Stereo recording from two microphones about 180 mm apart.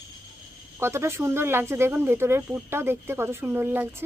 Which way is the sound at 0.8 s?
15° right (ahead or behind).